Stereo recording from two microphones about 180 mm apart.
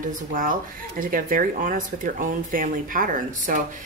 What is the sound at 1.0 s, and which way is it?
Speech, 50° right (ahead or behind).